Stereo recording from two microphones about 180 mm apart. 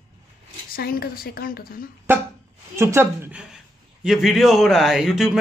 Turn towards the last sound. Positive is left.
turn(degrees=-5)  # may be behind; listen again after turning